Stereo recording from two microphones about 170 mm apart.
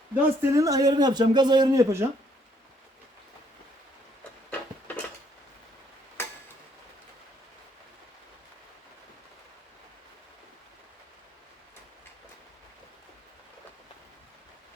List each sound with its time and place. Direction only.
0.1 s speech: 20° right (ahead or behind)
6.2 s tick-tock: 15° left (ahead or behind)